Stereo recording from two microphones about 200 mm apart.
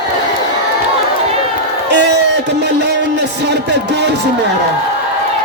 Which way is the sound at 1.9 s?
60° right (ahead or behind).